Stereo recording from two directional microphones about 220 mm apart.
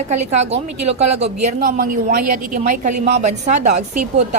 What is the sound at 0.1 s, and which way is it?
A woman's voice, 30° right (ahead or behind).